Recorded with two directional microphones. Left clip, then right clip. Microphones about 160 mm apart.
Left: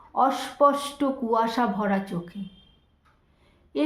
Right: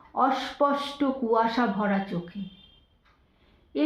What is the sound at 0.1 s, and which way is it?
Speech, 40° left (ahead or behind).